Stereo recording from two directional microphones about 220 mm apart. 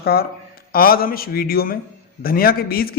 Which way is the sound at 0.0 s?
45° left (ahead or behind).